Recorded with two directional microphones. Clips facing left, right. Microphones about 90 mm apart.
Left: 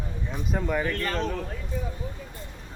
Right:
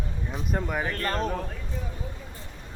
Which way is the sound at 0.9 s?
40° right (ahead or behind).